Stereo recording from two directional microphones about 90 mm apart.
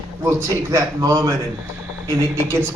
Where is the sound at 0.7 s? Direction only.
40° right (ahead or behind).